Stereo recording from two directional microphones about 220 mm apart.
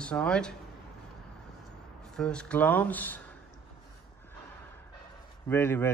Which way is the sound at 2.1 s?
5° left (ahead or behind).